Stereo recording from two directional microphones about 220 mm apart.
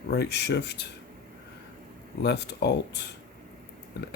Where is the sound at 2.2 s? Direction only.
50° left (ahead or behind).